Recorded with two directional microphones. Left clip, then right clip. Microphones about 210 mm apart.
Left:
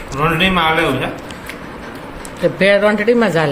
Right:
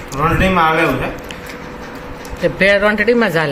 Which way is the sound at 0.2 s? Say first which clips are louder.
Right 1 dB; 15° left (ahead or behind).